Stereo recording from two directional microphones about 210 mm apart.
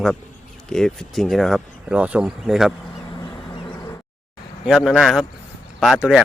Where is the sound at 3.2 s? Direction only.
20° left (ahead or behind).